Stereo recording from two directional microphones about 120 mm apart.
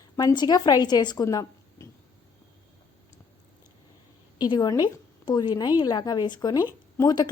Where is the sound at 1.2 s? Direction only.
25° left (ahead or behind).